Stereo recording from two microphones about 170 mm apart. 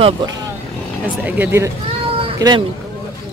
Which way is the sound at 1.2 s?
10° right (ahead or behind).